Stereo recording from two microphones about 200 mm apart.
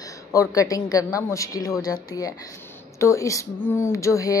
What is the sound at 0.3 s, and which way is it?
Speech, 15° left (ahead or behind).